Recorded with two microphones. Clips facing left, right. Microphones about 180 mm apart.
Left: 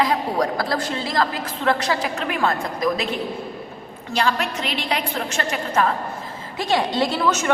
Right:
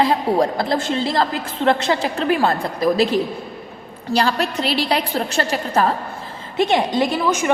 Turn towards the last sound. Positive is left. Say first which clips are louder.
# right 2 dB
turn(degrees=-15)  # may be behind; listen again after turning